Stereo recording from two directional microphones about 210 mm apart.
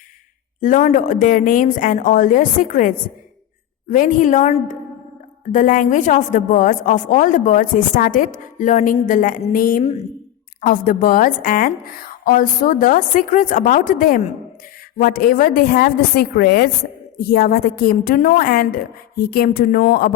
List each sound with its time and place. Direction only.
0.6 s a woman's voice: 40° left (ahead or behind)